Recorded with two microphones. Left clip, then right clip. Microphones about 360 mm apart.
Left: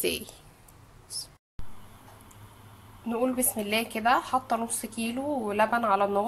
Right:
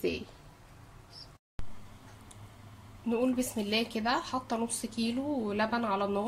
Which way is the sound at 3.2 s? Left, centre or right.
Left.